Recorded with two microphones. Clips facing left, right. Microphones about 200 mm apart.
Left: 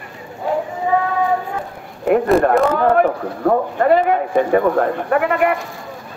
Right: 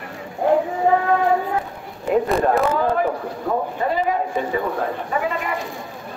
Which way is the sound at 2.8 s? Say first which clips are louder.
Left 5 dB; 65° left (ahead or behind).